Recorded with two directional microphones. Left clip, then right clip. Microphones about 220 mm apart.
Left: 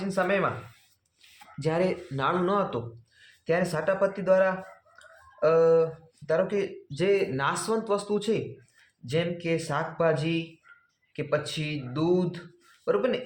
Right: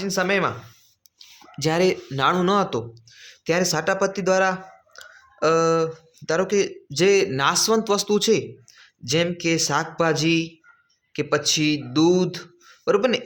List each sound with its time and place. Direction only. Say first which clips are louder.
0.0 s speech: right 4 dB; 45° right (ahead or behind)
1.6 s speech: right 6 dB; 40° right (ahead or behind)